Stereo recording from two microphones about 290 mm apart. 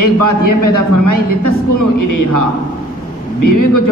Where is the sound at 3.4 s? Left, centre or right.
Left.